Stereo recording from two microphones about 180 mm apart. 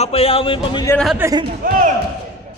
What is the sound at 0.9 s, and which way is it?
Speech, centre (ahead or behind).